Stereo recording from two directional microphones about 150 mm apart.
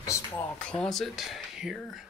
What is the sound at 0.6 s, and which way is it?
Speech, 5° left (ahead or behind).